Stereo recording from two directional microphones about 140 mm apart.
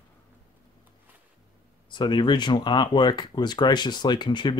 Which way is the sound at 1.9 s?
35° left (ahead or behind).